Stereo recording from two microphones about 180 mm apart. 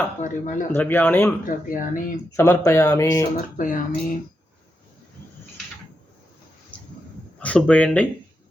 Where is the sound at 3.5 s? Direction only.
45° left (ahead or behind).